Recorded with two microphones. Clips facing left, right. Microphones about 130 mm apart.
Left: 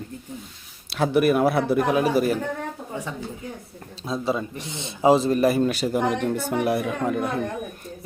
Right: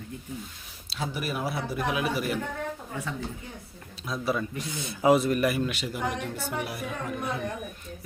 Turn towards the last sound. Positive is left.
turn(degrees=60)  # may be behind; listen again after turning